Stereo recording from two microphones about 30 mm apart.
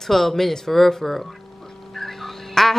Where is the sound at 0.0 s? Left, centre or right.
Centre.